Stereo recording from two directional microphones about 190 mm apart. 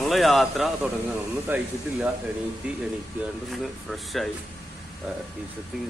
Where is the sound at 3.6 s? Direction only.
Centre (ahead or behind).